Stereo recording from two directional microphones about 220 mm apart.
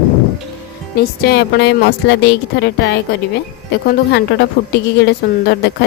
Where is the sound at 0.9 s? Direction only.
45° left (ahead or behind).